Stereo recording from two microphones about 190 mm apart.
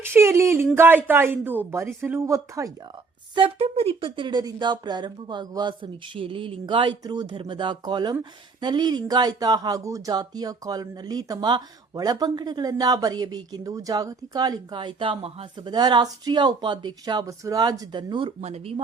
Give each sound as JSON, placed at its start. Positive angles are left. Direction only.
{"t": 0.0, "sound": "a woman's voice", "side_deg": -15}
{"t": 3.3, "sound": "speech", "side_deg": -30}